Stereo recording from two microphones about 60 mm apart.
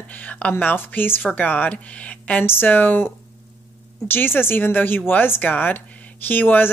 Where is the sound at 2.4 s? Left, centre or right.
Left.